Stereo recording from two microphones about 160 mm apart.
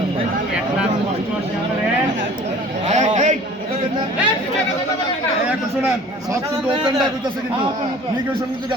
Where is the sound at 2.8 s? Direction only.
45° right (ahead or behind).